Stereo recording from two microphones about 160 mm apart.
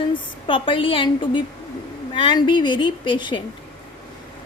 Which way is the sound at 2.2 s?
30° left (ahead or behind).